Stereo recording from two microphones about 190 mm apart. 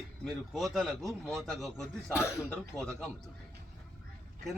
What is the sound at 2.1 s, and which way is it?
Speech, 15° left (ahead or behind).